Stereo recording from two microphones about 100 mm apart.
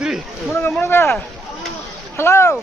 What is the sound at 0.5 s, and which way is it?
Speech, 20° left (ahead or behind).